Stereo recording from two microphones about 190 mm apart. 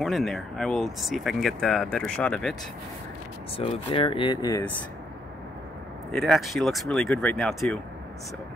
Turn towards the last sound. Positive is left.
turn(degrees=0)  # may be behind; listen again after turning